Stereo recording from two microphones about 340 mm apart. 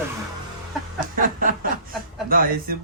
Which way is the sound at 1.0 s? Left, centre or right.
Right.